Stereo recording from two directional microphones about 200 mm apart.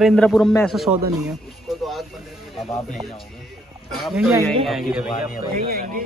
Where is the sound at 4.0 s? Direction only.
Centre (ahead or behind).